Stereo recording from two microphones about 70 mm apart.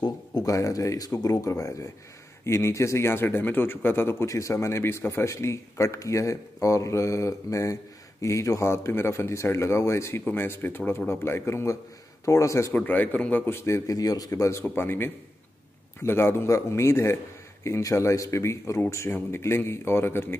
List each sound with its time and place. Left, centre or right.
0.0 s a sound: left
0.5 s a man's voice: left
12.7 s a man's voice: left
13.6 s a man's voice: left
13.9 s speech: left
14.6 s a man's voice: left